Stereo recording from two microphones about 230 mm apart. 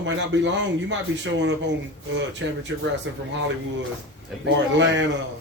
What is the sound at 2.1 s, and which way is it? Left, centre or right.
Speech, right.